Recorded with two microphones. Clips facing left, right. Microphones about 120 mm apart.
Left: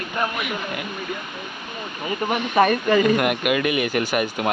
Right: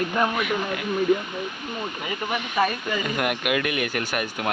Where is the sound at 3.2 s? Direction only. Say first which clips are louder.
Left 4 dB; centre (ahead or behind).